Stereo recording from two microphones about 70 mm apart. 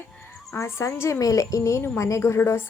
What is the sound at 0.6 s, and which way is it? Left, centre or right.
Speech, left.